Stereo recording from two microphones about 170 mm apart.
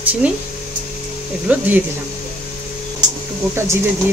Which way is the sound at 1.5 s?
10° right (ahead or behind).